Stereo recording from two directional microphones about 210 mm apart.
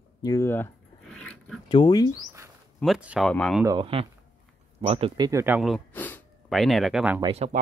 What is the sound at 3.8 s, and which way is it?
Speech, 25° right (ahead or behind).